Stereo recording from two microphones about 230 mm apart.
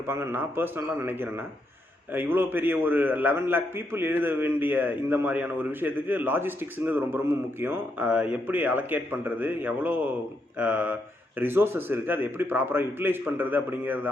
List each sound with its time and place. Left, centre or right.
0.1 s a man's voice: centre